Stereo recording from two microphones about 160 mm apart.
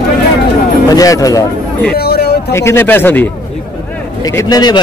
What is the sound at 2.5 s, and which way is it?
Speech, 15° left (ahead or behind).